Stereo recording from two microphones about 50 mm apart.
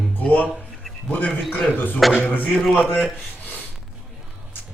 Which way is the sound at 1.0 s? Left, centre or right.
Left.